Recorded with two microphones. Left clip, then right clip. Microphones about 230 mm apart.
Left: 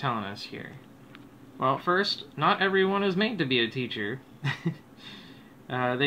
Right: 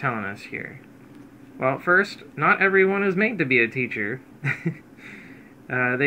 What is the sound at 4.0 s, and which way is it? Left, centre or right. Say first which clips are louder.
Speech: right 5 dB; centre.